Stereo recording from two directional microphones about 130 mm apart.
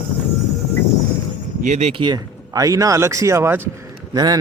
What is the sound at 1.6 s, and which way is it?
Speech, 65° right (ahead or behind).